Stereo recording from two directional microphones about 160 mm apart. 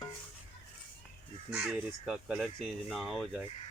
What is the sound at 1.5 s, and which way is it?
Speech, 5° right (ahead or behind).